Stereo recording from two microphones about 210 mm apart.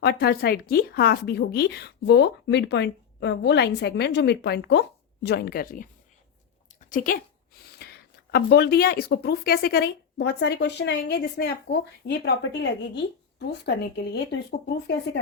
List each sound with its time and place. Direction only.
0.0 s speech: 50° left (ahead or behind)
6.7 s a sound: 40° left (ahead or behind)
8.3 s speech: 50° left (ahead or behind)